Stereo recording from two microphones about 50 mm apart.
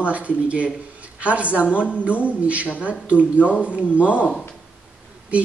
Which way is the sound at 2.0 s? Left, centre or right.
Right.